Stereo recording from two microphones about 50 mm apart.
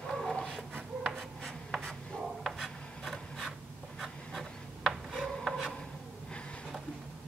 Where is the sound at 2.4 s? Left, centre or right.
Centre.